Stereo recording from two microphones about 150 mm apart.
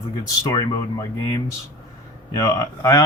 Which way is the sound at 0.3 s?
20° left (ahead or behind).